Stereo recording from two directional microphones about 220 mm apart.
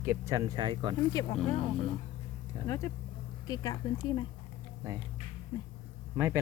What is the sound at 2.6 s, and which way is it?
Speech, 15° left (ahead or behind).